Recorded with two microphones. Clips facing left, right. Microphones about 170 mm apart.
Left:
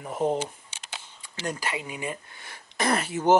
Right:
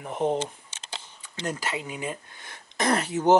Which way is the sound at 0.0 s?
Centre (ahead or behind).